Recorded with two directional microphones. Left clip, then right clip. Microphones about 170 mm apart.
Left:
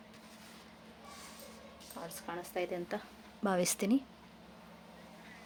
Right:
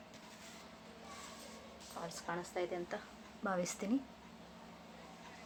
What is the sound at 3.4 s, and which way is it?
Speech, 90° left.